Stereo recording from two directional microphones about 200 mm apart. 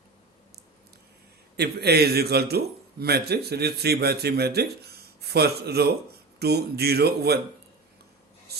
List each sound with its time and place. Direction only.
1.5 s a man's voice: 55° right (ahead or behind)